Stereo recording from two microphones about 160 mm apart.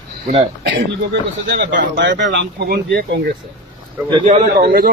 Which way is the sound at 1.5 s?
90° right.